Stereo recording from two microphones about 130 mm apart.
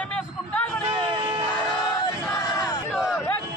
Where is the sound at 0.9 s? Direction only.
45° right (ahead or behind).